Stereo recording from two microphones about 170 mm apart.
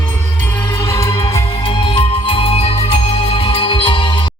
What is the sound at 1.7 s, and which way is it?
Music, 30° left (ahead or behind).